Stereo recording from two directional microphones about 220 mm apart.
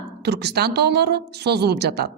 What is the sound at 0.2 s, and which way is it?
A woman's voice, 50° right (ahead or behind).